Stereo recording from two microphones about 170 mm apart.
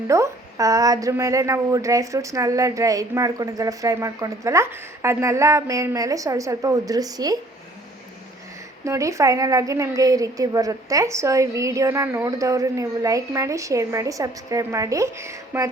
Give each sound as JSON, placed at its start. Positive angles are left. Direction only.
{"t": 0.1, "sound": "a woman's voice", "side_deg": -20}
{"t": 8.8, "sound": "a woman's voice", "side_deg": -20}